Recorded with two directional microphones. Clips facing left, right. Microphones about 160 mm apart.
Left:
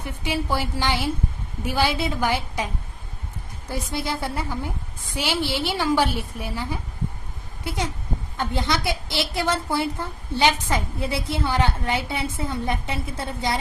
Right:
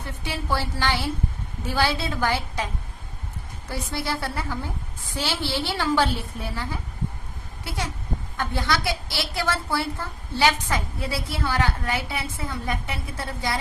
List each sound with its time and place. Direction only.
0.0 s a woman's voice: 15° left (ahead or behind)
3.7 s a woman's voice: 15° left (ahead or behind)